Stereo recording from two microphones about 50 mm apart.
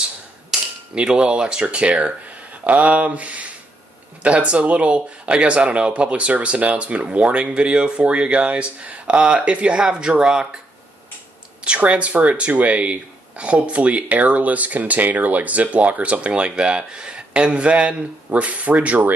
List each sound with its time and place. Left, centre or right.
0.5 s cap gun: centre
0.9 s speech: centre
11.6 s speech: right